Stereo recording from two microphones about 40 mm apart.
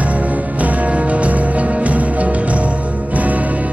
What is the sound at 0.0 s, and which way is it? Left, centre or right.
Music, right.